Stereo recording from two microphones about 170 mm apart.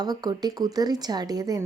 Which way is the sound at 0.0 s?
25° right (ahead or behind).